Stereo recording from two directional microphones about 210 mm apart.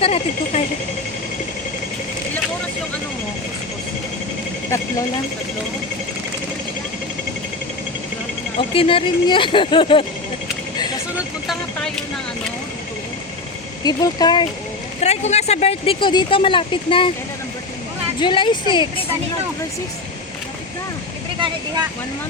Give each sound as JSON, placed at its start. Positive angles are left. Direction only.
{"t": 0.0, "sound": "speech", "side_deg": 30}
{"t": 8.5, "sound": "speech", "side_deg": 25}
{"t": 11.4, "sound": "vehicle", "side_deg": 5}
{"t": 13.8, "sound": "speech", "side_deg": 20}
{"t": 15.0, "sound": "speech", "side_deg": 30}
{"t": 18.2, "sound": "speech", "side_deg": 25}